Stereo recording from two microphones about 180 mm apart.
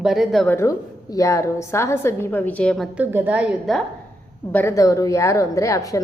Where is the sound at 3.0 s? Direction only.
10° right (ahead or behind).